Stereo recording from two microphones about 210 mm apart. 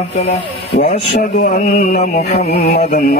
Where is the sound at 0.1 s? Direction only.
30° left (ahead or behind).